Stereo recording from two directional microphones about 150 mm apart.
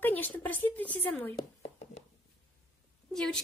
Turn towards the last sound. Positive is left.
turn(degrees=5)  # may be behind; listen again after turning